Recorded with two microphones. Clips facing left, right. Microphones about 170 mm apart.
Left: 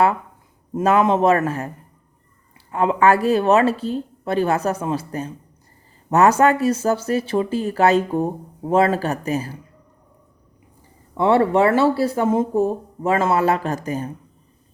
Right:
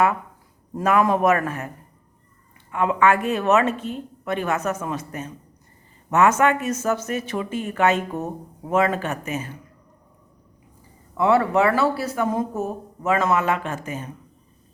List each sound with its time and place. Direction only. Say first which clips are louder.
0.7 s a man's voice: left 3 dB; 25° left (ahead or behind)
2.7 s speech: left 3 dB; 35° left (ahead or behind)
11.2 s speech: left 3 dB; 30° left (ahead or behind)